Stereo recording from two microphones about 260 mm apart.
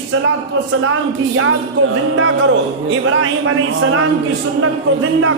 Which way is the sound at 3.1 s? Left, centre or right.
Right.